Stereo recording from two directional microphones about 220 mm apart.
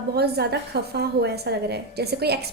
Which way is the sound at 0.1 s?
45° right (ahead or behind).